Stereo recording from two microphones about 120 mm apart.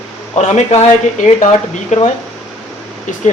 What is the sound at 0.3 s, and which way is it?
Speech, 70° left (ahead or behind).